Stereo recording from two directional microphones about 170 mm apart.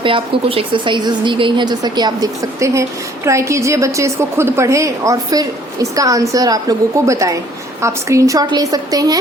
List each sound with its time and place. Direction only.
0.0 s a woman's voice: 30° right (ahead or behind)